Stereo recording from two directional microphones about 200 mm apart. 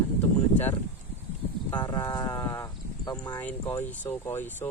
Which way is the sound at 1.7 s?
20° left (ahead or behind).